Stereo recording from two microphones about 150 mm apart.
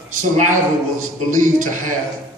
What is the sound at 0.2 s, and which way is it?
Speech, 60° right (ahead or behind).